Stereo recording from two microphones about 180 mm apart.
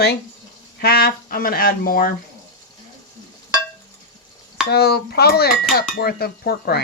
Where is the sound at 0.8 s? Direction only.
60° left (ahead or behind).